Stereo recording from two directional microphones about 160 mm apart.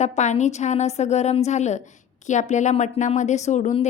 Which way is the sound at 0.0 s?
45° left (ahead or behind).